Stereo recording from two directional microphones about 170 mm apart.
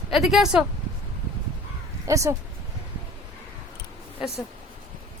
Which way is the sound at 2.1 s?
20° right (ahead or behind).